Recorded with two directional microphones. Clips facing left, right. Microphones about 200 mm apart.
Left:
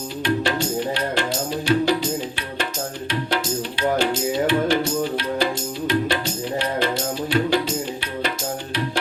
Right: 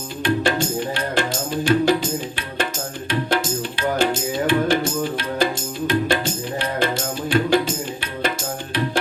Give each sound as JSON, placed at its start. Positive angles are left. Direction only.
{"t": 0.2, "sound": "music", "side_deg": -50}